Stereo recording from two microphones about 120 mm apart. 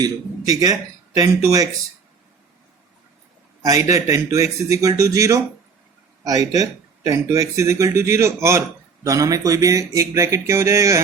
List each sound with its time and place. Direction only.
0.6 s speech: 30° right (ahead or behind)
3.6 s speech: 30° right (ahead or behind)